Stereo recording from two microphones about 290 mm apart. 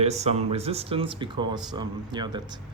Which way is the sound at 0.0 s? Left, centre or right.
Right.